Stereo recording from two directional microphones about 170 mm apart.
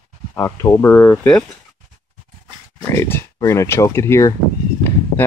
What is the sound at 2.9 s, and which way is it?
Speech, 15° left (ahead or behind).